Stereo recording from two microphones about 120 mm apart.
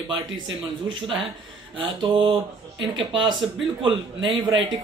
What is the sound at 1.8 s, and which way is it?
Speech, 45° right (ahead or behind).